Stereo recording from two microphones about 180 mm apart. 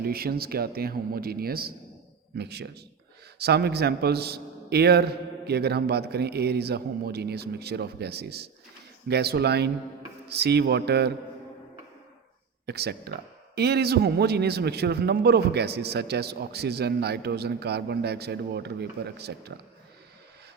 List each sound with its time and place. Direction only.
0.0 s a man's voice: 55° right (ahead or behind)
12.6 s a man's voice: 65° right (ahead or behind)